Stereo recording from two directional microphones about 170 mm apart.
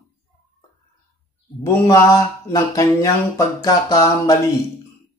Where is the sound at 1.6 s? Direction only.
20° left (ahead or behind).